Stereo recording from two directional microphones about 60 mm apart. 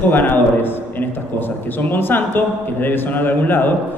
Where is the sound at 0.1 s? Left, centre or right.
Left.